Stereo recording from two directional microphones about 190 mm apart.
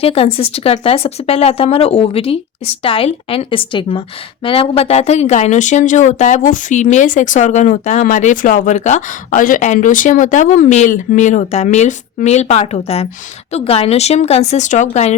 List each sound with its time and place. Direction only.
0.0 s a woman's voice: 30° left (ahead or behind)